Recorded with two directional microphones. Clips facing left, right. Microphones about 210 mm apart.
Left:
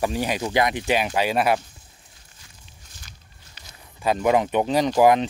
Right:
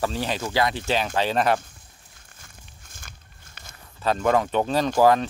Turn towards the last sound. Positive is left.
turn(degrees=15)  # may be behind; listen again after turning